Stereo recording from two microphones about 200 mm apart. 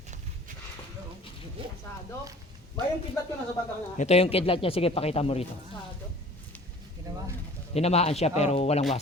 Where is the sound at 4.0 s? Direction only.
30° left (ahead or behind).